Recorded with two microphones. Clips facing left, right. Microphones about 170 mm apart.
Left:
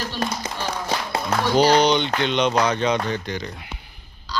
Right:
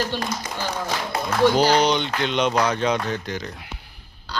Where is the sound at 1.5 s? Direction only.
5° right (ahead or behind).